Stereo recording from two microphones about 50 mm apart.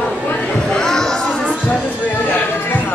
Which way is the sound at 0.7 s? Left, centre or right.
Centre.